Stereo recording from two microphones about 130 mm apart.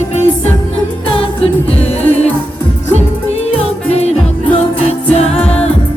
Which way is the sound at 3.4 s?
50° left (ahead or behind).